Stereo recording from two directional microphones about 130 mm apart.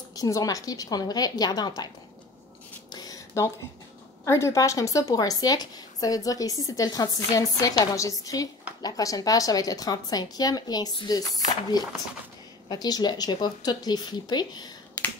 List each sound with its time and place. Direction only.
0.1 s a woman's voice: 25° left (ahead or behind)
2.9 s a sound: 30° left (ahead or behind)
4.2 s a woman's voice: 20° left (ahead or behind)